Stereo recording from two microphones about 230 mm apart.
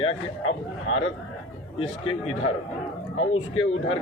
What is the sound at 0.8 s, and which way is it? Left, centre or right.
Speech, left.